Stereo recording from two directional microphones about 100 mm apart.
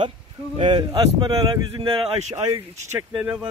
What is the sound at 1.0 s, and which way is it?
Speech, 40° right (ahead or behind).